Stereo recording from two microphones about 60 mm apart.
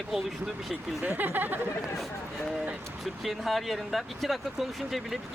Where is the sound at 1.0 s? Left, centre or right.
Right.